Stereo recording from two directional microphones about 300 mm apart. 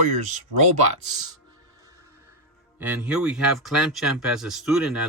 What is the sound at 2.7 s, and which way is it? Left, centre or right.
Speech, centre.